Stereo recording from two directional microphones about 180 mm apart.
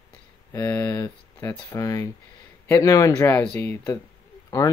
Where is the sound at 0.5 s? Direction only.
10° left (ahead or behind).